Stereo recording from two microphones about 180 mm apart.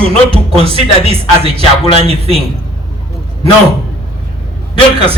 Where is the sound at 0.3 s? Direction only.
30° right (ahead or behind).